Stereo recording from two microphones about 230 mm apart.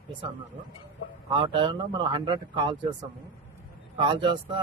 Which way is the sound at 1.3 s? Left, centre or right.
Right.